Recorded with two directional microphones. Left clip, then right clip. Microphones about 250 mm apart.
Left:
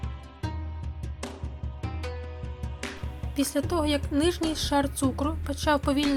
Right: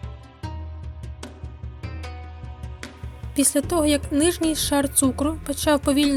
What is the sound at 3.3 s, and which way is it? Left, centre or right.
A woman's voice, right.